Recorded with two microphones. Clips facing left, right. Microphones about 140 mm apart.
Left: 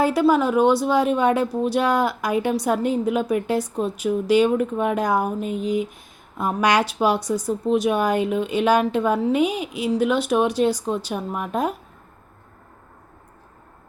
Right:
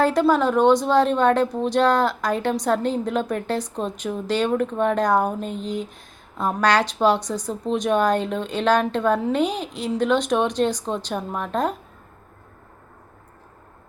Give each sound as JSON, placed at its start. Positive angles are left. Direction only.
{"t": 0.0, "sound": "speech", "side_deg": 10}